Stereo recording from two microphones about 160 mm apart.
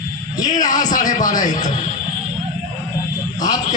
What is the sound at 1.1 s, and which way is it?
Speech, 55° left (ahead or behind).